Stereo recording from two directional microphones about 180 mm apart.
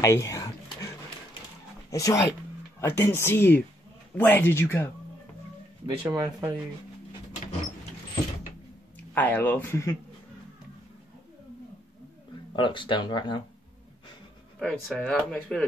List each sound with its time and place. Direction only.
0.0 s a sound: 15° left (ahead or behind)
1.9 s speech: 20° left (ahead or behind)
6.0 s speech: 15° right (ahead or behind)
9.1 s speech: 10° left (ahead or behind)
12.5 s speech: 25° left (ahead or behind)
14.6 s speech: 5° left (ahead or behind)